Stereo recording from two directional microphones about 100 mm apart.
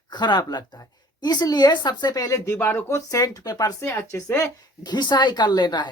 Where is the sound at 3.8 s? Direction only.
25° left (ahead or behind).